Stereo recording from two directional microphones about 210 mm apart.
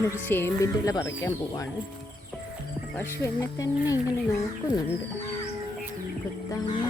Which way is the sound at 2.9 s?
15° left (ahead or behind).